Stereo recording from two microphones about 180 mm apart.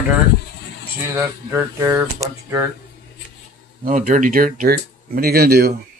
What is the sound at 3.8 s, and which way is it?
Speech, 50° right (ahead or behind).